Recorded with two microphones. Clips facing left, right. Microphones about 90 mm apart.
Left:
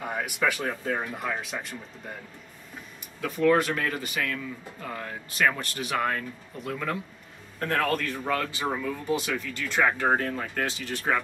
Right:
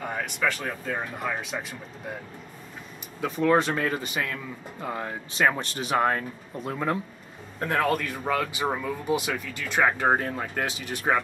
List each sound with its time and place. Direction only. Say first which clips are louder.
0.0 s speech: even; 5° left (ahead or behind)
3.2 s speech: even; 20° right (ahead or behind)